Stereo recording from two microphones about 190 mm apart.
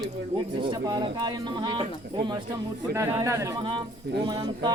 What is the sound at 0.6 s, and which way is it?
Speech, 25° right (ahead or behind).